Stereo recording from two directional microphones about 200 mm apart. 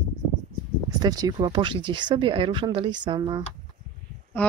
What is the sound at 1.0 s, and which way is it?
Speech, 20° right (ahead or behind).